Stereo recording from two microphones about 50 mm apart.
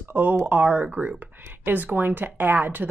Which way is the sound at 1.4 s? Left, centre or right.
Right.